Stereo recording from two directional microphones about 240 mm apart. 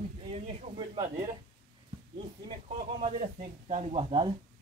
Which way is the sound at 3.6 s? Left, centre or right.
Right.